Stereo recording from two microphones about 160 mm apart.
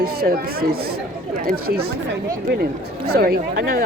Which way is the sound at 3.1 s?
75° right (ahead or behind).